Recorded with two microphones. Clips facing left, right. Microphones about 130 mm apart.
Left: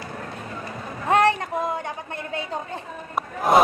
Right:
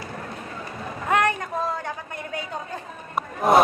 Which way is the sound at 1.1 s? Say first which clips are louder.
Left 3 dB; 30° left (ahead or behind).